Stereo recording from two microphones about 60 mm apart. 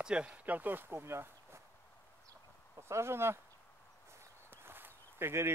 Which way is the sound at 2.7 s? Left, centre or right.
Right.